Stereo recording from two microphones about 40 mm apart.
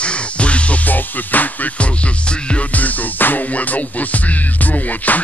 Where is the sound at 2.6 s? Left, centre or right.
Left.